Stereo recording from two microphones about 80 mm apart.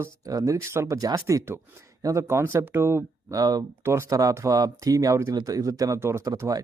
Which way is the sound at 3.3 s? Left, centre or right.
Right.